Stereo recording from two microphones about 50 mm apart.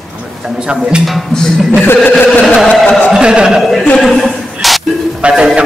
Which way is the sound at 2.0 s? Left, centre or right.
Left.